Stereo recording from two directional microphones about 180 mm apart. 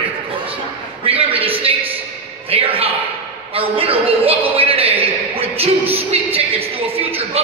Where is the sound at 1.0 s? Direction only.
30° right (ahead or behind).